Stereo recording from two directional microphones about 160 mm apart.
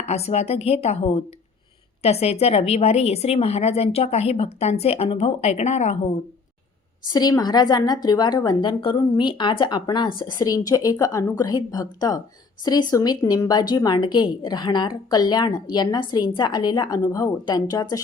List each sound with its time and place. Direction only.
0.1 s a woman's voice: 40° left (ahead or behind)
7.1 s a woman's voice: 25° left (ahead or behind)